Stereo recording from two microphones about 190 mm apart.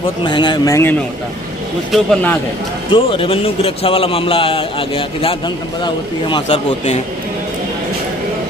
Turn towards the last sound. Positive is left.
turn(degrees=25)  # may be behind; listen again after turning